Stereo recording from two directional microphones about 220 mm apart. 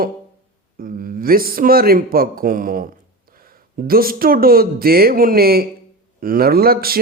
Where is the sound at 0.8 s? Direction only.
40° right (ahead or behind).